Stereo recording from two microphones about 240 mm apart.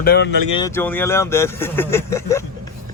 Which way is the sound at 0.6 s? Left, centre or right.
Centre.